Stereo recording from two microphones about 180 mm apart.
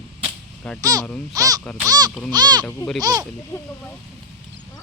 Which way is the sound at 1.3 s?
20° right (ahead or behind).